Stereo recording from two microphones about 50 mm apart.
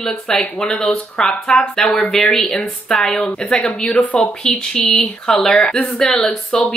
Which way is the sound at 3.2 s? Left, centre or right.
Left.